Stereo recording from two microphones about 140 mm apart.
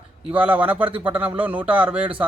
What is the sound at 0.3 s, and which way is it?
A man's voice, 10° right (ahead or behind).